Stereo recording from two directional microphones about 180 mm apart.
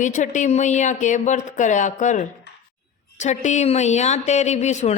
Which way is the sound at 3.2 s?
40° left (ahead or behind).